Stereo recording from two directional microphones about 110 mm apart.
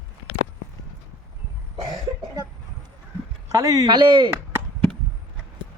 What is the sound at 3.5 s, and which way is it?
Speech, 35° right (ahead or behind).